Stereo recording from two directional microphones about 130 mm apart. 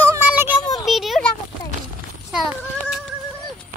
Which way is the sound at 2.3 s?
5° right (ahead or behind).